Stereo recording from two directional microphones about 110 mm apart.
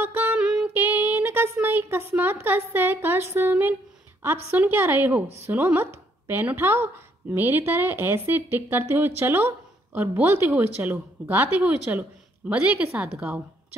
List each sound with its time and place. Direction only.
0.0 s a sound: 20° right (ahead or behind)
0.4 s music: 5° right (ahead or behind)
0.7 s a woman's voice: 20° right (ahead or behind)